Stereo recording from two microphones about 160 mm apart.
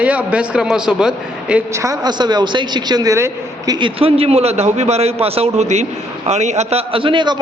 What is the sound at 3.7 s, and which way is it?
A man's voice, 35° right (ahead or behind).